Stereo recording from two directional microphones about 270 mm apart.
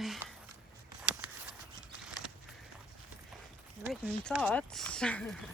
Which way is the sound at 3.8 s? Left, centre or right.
Centre.